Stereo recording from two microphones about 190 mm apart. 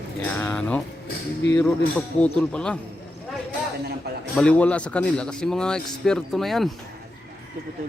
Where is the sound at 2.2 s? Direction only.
5° left (ahead or behind).